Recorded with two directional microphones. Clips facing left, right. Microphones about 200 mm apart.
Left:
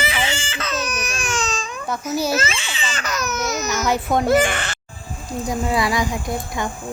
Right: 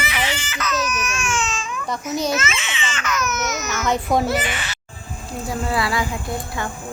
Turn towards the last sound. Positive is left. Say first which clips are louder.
# left 2 dB
turn(degrees=15)  # may be behind; listen again after turning